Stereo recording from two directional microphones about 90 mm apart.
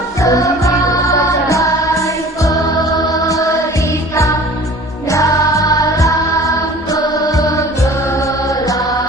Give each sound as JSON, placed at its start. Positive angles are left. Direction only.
{"t": 0.2, "sound": "music", "side_deg": 35}
{"t": 3.1, "sound": "chant", "side_deg": 40}
{"t": 4.1, "sound": "music", "side_deg": 35}